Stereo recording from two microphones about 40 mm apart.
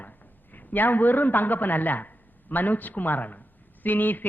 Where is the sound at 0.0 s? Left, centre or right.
Left.